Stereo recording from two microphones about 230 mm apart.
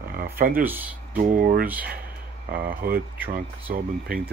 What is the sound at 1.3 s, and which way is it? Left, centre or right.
Speech, right.